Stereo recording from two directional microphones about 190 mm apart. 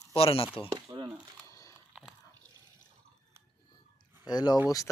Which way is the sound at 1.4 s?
15° left (ahead or behind).